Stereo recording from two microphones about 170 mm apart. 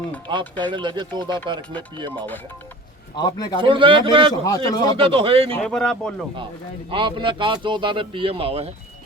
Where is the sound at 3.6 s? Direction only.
30° right (ahead or behind).